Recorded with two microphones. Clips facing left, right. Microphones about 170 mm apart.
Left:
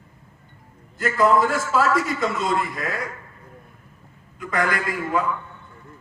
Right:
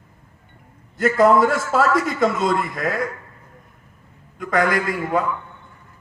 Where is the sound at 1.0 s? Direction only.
65° right (ahead or behind).